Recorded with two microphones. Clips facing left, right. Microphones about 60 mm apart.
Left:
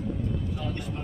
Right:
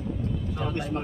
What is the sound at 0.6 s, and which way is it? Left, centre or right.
Speech, right.